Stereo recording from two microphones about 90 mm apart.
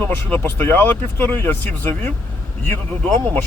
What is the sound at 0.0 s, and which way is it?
Speech, 25° left (ahead or behind).